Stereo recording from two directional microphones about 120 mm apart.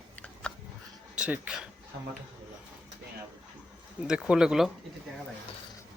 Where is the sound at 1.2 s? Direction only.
10° right (ahead or behind).